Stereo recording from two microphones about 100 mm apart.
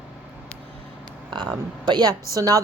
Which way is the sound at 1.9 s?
40° right (ahead or behind).